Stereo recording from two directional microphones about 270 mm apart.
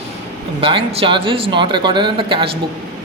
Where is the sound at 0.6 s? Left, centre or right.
Right.